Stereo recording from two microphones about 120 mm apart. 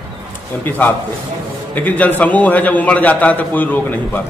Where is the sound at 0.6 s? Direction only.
15° left (ahead or behind).